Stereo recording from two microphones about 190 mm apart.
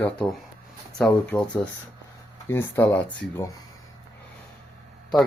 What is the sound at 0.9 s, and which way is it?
Speech, 5° left (ahead or behind).